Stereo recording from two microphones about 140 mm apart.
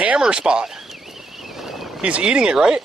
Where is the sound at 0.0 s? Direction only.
5° right (ahead or behind).